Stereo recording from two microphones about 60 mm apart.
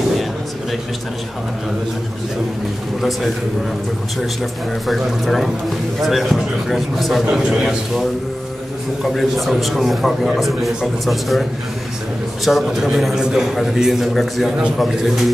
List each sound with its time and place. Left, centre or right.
3.0 s a man's voice: centre
4.8 s a man's voice: centre
7.2 s a man's voice: centre
12.4 s a man's voice: centre